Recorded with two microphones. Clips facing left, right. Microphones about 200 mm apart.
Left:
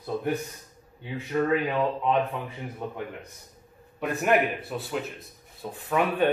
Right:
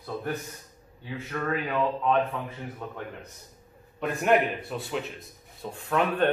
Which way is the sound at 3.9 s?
5° left (ahead or behind).